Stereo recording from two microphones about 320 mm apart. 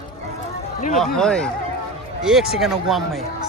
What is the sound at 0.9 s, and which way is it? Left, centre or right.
A man's voice, centre.